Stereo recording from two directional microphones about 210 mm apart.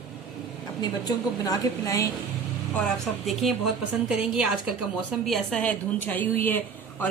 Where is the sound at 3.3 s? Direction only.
Centre (ahead or behind).